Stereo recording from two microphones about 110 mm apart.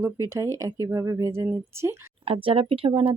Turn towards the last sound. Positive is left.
turn(degrees=-50)  # may be behind; listen again after turning